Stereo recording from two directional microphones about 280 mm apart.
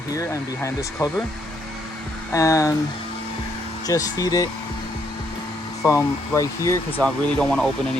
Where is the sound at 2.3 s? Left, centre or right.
Centre.